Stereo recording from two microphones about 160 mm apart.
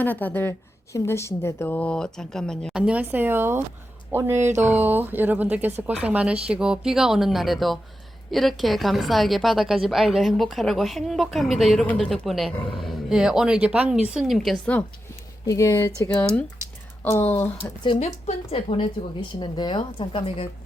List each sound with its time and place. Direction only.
0.0 s a woman's voice: 10° left (ahead or behind)
15.4 s speech: 20° left (ahead or behind)
17.8 s speech: 40° left (ahead or behind)